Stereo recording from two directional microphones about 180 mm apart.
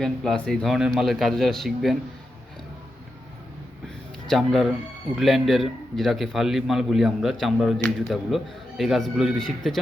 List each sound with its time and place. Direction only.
0.0 s a man's voice: 5° left (ahead or behind)
4.3 s a man's voice: centre (ahead or behind)